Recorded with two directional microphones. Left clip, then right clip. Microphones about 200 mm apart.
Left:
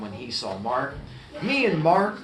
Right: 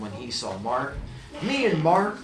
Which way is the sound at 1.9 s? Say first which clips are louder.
Left 1 dB; 25° left (ahead or behind).